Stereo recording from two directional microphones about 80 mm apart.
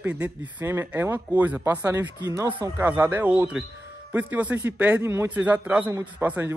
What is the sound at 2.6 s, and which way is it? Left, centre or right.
A man's voice, right.